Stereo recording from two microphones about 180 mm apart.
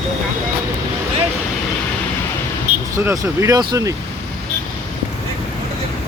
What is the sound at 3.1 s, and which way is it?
Speech, 20° right (ahead or behind).